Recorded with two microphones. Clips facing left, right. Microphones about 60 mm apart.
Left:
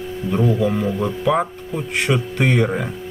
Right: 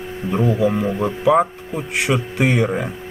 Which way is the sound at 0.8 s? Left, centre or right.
Right.